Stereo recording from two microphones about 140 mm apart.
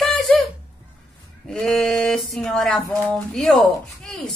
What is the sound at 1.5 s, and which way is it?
A woman's voice, 5° left (ahead or behind).